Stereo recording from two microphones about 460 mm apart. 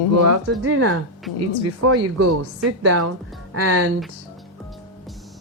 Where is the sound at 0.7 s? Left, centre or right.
Right.